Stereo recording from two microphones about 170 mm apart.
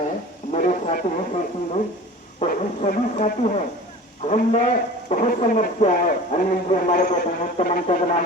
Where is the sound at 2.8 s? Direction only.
40° left (ahead or behind).